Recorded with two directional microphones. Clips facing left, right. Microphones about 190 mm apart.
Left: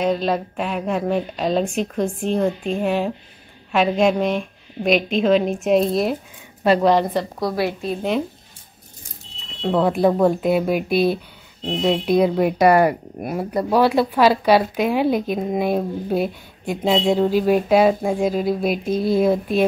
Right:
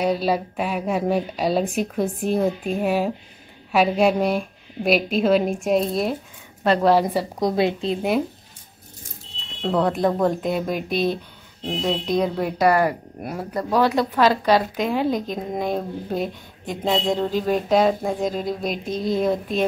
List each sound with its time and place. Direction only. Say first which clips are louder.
0.0 s a woman's voice: left 1 dB; 10° right (ahead or behind); by 6.9 s 5° left (ahead or behind)
6.9 s a woman's voice: even; 5° right (ahead or behind)
7.3 s a woman's voice: right 2 dB; 20° right (ahead or behind)
9.6 s speech: left 3 dB; 5° left (ahead or behind)